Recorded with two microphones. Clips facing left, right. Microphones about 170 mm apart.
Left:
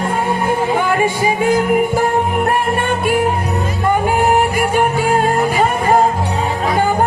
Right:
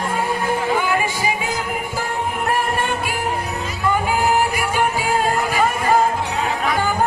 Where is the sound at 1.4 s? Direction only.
55° left (ahead or behind).